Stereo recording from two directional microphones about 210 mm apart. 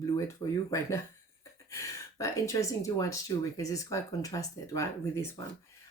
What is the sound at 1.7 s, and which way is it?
Speech, 15° left (ahead or behind).